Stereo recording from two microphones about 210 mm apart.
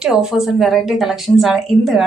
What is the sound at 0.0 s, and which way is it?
A woman's voice, 5° right (ahead or behind).